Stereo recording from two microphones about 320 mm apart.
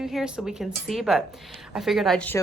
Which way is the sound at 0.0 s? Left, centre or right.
Centre.